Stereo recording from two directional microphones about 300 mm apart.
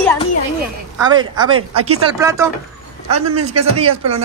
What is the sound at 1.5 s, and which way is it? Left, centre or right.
Speech, right.